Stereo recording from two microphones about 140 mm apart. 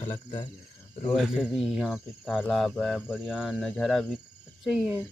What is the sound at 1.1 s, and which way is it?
Speech, 5° right (ahead or behind).